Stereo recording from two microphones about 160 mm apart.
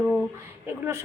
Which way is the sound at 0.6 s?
15° right (ahead or behind).